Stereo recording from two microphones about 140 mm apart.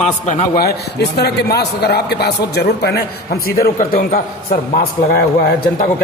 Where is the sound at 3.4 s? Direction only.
90° left.